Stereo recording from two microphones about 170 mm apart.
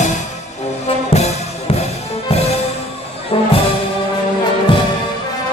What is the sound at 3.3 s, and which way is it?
Music, 35° left (ahead or behind).